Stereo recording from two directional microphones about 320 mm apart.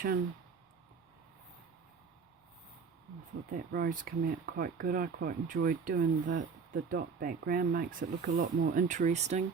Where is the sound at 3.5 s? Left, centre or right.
Right.